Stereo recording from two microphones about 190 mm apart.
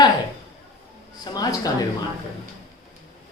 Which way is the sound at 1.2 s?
20° left (ahead or behind).